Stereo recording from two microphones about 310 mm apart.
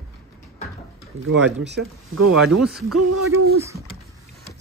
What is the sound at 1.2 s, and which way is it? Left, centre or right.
Speech, right.